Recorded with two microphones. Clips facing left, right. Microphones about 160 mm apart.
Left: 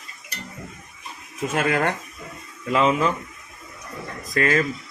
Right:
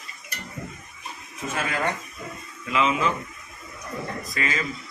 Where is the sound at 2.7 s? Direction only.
40° left (ahead or behind).